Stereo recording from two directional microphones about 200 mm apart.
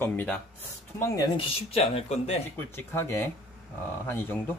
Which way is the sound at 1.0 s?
20° left (ahead or behind).